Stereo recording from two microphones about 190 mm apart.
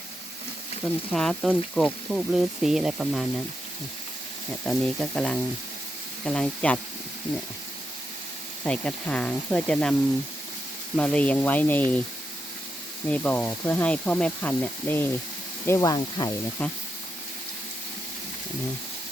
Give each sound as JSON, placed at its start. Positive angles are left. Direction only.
{"t": 1.1, "sound": "speech", "side_deg": 5}
{"t": 4.6, "sound": "speech", "side_deg": 5}
{"t": 8.6, "sound": "speech", "side_deg": 5}
{"t": 10.9, "sound": "speech", "side_deg": 5}
{"t": 13.1, "sound": "speech", "side_deg": 10}